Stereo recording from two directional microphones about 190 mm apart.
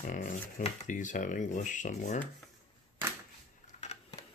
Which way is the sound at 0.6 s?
40° left (ahead or behind).